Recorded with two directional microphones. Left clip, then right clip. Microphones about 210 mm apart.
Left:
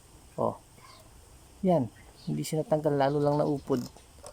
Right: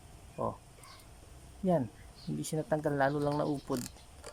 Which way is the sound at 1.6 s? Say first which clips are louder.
Left 5 dB; 10° left (ahead or behind).